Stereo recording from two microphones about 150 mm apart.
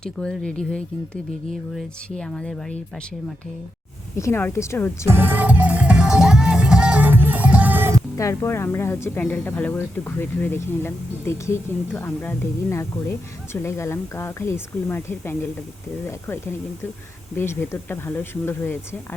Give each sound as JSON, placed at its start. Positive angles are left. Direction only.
{"t": 0.0, "sound": "speech", "side_deg": 5}
{"t": 4.2, "sound": "speech", "side_deg": 15}
{"t": 5.0, "sound": "music", "side_deg": -15}
{"t": 8.1, "sound": "speech", "side_deg": 20}